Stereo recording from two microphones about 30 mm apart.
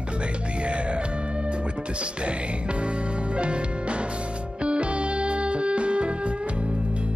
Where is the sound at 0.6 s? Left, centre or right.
Right.